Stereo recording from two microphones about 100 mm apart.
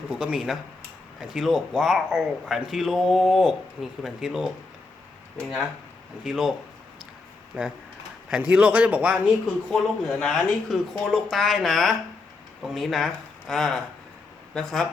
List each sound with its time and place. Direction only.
0.1 s speech: 5° right (ahead or behind)
6.2 s speech: centre (ahead or behind)
7.5 s a man's voice: 20° right (ahead or behind)
9.6 s speech: 5° left (ahead or behind)